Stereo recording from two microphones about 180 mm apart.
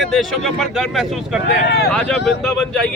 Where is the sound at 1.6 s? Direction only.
65° left (ahead or behind).